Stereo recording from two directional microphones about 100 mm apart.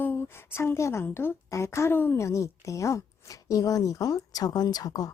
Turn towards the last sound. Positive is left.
turn(degrees=40)  # may be behind; listen again after turning